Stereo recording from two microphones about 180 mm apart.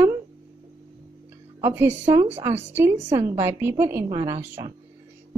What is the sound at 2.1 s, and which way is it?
A woman's voice, 15° right (ahead or behind).